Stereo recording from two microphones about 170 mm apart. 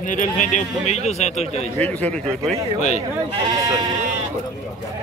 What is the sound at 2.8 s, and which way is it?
Speech, 40° left (ahead or behind).